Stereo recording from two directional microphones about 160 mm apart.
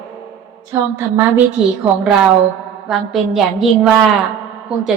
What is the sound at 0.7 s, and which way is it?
Speech, 15° right (ahead or behind).